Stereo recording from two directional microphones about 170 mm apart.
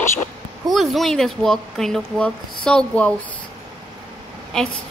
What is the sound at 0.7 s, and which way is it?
Speech, centre (ahead or behind).